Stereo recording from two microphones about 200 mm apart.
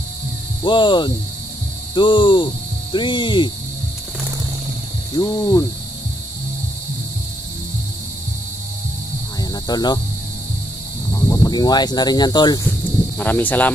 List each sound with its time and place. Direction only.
0.7 s speech: 25° left (ahead or behind)
5.2 s speech: 20° left (ahead or behind)
9.4 s hum: 20° left (ahead or behind)
11.1 s speech: 15° left (ahead or behind)
13.2 s speech: 10° left (ahead or behind)